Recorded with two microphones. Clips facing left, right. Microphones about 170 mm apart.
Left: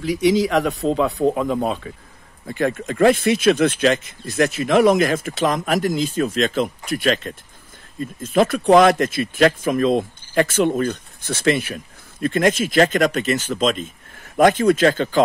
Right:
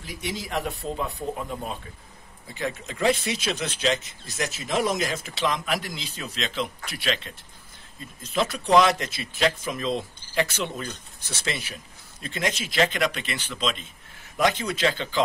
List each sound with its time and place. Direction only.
0.0 s speech: 85° left
2.4 s speech: 55° left (ahead or behind)